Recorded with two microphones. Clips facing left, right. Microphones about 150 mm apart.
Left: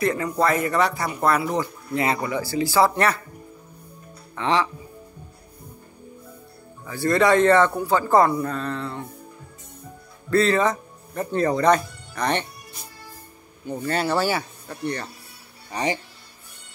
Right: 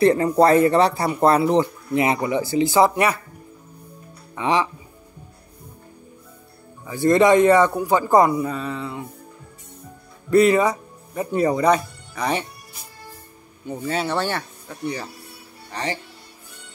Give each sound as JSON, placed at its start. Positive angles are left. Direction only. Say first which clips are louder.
{"t": 0.0, "sound": "speech", "louder": "right 7 dB", "side_deg": -35}
{"t": 4.4, "sound": "a man's voice", "louder": "right 1 dB", "side_deg": -15}
{"t": 6.9, "sound": "a man's voice", "louder": "right 4 dB", "side_deg": -20}
{"t": 10.3, "sound": "speech", "louder": "right 4 dB", "side_deg": -15}
{"t": 13.7, "sound": "speech", "louder": "left 1 dB", "side_deg": 0}